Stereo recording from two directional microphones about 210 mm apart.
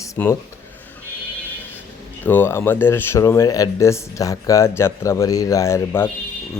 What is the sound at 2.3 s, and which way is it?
Speech, 10° left (ahead or behind).